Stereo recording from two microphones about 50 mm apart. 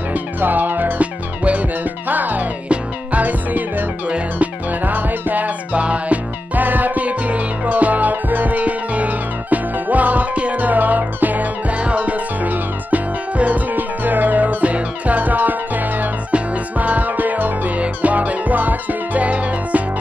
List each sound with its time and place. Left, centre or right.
0.1 s music: right